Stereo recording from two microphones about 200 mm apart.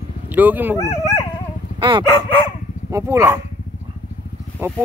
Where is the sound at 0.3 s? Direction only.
10° right (ahead or behind).